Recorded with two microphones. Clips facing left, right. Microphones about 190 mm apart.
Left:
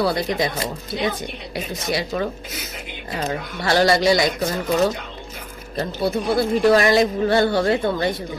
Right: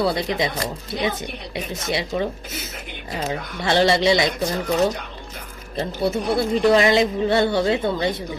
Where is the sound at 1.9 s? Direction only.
25° right (ahead or behind).